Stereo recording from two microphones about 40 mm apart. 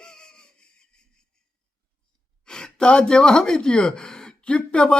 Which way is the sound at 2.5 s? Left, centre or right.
Centre.